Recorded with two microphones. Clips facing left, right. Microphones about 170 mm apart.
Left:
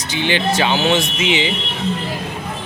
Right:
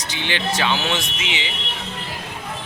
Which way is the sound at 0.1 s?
10° left (ahead or behind).